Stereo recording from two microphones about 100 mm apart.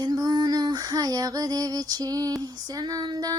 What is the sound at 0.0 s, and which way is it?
Female singing, 40° right (ahead or behind).